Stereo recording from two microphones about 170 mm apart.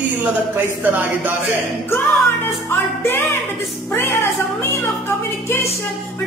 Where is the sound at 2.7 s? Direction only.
15° left (ahead or behind).